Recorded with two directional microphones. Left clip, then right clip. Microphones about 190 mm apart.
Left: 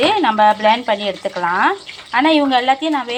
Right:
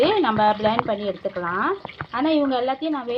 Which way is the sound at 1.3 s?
25° left (ahead or behind).